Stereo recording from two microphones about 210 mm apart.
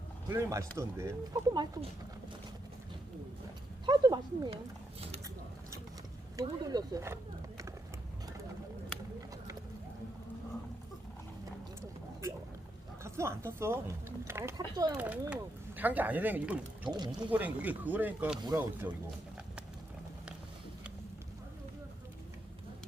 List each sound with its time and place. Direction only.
0.3 s speech: 15° right (ahead or behind)
3.8 s speech: 20° right (ahead or behind)
6.3 s speech: 20° right (ahead or behind)
13.0 s speech: 15° right (ahead or behind)
15.0 s speech: 5° right (ahead or behind)